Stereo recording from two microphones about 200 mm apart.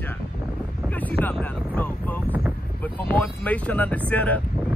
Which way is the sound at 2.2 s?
10° right (ahead or behind).